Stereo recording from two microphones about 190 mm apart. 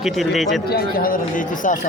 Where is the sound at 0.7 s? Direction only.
50° left (ahead or behind).